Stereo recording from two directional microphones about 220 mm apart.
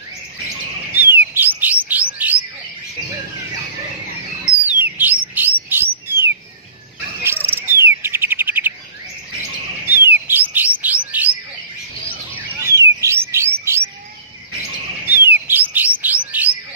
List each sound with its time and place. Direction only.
0.9 s bird: 10° right (ahead or behind)
4.6 s bird: 10° right (ahead or behind)
5.3 s chirp: 10° right (ahead or behind)
7.4 s bird: 10° right (ahead or behind)
9.8 s bird: 10° right (ahead or behind)
12.5 s music: 15° right (ahead or behind)
15.0 s bird: 10° right (ahead or behind)